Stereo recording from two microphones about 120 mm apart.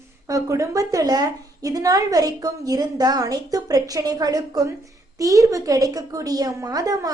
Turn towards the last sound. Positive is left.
turn(degrees=-30)  # may be behind; listen again after turning